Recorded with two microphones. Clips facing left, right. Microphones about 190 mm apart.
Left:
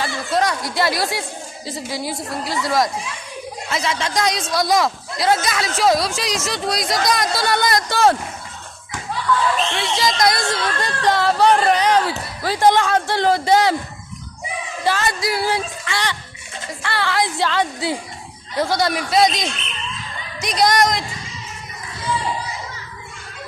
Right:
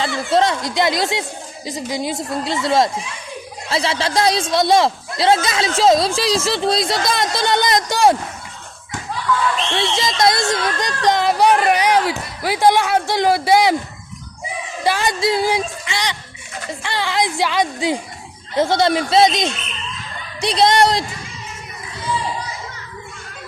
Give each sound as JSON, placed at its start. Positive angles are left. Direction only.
{"t": 0.3, "sound": "speech", "side_deg": -25}
{"t": 9.7, "sound": "speech", "side_deg": -25}
{"t": 14.8, "sound": "a woman's voice", "side_deg": -15}